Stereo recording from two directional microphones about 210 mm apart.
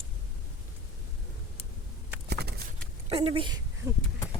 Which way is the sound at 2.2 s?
50° right (ahead or behind).